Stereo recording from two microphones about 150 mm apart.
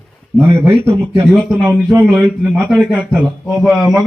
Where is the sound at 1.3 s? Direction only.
Centre (ahead or behind).